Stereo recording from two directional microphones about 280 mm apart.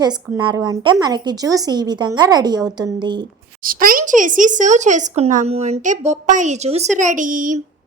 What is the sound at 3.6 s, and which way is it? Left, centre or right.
A woman's voice, right.